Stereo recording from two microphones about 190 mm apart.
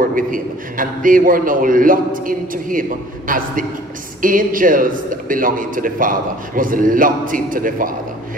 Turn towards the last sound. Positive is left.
turn(degrees=-45)  # may be behind; listen again after turning